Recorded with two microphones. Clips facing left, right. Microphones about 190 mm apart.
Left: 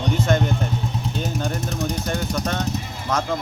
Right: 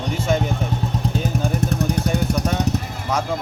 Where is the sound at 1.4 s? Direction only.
5° right (ahead or behind).